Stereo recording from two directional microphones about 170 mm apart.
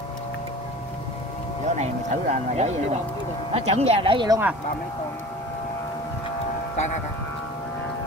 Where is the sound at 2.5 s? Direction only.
40° right (ahead or behind).